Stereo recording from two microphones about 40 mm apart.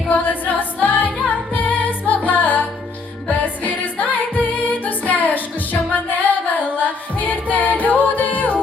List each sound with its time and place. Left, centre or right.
0.1 s music: left
6.7 s a capella: left